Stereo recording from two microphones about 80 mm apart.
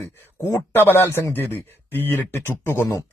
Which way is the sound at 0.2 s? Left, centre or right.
Left.